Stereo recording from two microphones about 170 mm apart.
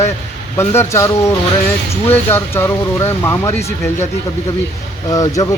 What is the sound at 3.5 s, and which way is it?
Speech, 40° left (ahead or behind).